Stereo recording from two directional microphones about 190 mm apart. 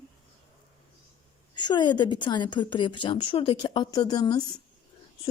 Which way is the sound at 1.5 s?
25° left (ahead or behind).